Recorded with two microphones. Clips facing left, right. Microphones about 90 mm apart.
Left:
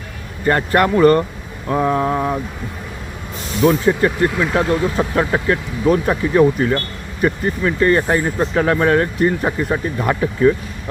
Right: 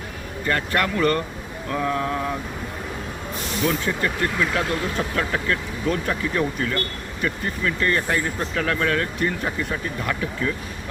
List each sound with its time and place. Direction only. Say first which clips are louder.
0.4 s speech: left 8 dB; 30° left (ahead or behind)
1.7 s mantra: left 7 dB; 30° left (ahead or behind)
3.6 s speech: left 10 dB; 35° left (ahead or behind)